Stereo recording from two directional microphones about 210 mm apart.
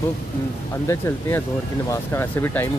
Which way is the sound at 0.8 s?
10° left (ahead or behind).